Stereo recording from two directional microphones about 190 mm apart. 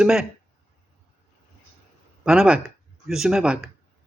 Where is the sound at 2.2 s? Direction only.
5° right (ahead or behind).